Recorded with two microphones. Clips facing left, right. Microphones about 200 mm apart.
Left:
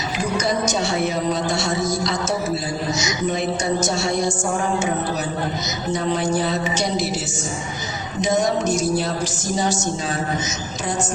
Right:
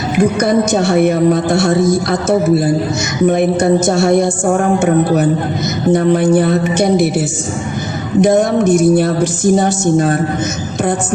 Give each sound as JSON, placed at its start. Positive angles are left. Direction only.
{"t": 0.2, "sound": "a woman's voice", "side_deg": -55}
{"t": 8.2, "sound": "a woman's voice", "side_deg": -55}